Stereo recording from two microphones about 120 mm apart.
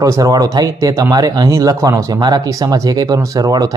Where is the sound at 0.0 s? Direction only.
30° right (ahead or behind).